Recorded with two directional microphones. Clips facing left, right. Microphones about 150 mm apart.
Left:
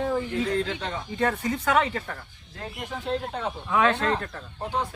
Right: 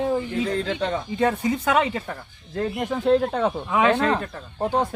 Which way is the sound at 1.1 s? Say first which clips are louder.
Right 2 dB; 15° right (ahead or behind).